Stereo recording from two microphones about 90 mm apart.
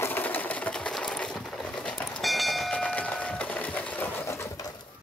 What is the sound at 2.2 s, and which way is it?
Bell, centre (ahead or behind).